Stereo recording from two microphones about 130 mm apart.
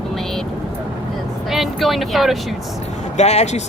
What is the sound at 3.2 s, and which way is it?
Speech, 60° left (ahead or behind).